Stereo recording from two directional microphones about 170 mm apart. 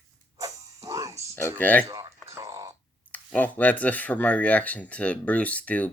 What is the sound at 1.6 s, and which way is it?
Speech, 10° left (ahead or behind).